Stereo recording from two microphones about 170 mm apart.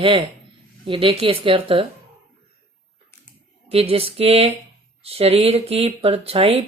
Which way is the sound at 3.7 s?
35° right (ahead or behind).